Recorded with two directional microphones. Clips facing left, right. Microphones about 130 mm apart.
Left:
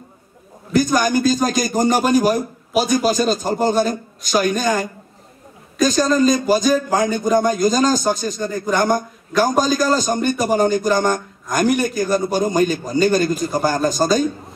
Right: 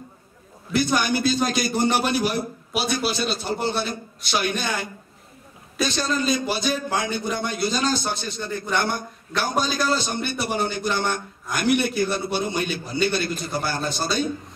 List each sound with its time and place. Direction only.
0.7 s a man's voice: 40° left (ahead or behind)